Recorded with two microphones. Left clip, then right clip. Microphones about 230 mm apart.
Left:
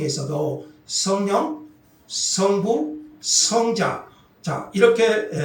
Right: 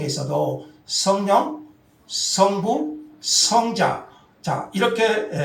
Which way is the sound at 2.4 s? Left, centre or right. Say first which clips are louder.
Right 1 dB; right.